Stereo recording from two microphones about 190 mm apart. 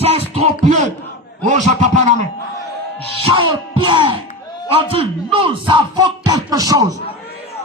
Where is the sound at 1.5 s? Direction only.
40° right (ahead or behind).